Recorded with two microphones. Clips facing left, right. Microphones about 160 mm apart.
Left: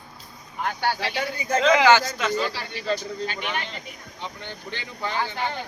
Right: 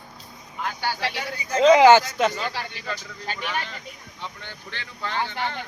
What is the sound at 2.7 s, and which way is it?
Speech, 35° left (ahead or behind).